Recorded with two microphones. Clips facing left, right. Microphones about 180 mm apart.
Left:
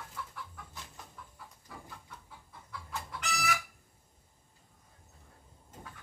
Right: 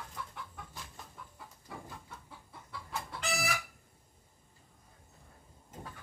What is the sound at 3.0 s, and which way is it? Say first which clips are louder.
Chicken: even; 30° right (ahead or behind).